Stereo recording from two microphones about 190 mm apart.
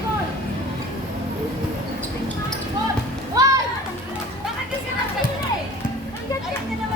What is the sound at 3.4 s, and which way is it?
Music, 15° right (ahead or behind).